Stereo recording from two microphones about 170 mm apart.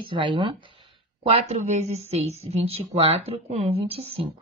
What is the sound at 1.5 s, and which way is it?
A woman's voice, 40° right (ahead or behind).